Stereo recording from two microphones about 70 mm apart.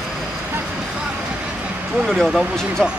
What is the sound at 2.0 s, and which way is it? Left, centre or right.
Speech, centre.